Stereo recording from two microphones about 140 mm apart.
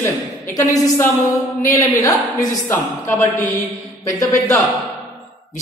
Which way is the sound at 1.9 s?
25° left (ahead or behind).